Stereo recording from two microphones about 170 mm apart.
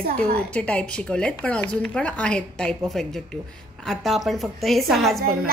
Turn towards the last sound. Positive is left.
turn(degrees=0)  # may be behind; listen again after turning